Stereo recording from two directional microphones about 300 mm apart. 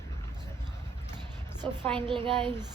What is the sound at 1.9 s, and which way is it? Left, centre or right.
Speech, centre.